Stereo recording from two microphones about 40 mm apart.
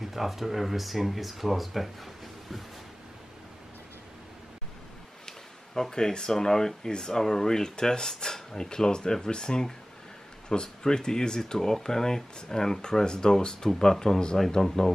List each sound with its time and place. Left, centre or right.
0.0 s speech: centre
5.8 s speech: centre